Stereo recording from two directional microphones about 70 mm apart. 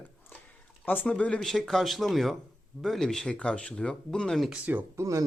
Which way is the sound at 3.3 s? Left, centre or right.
Centre.